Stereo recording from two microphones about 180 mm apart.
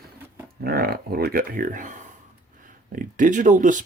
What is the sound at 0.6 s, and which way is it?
Speech, 55° right (ahead or behind).